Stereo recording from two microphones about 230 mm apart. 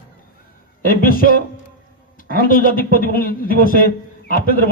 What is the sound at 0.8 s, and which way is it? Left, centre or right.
A man's voice, left.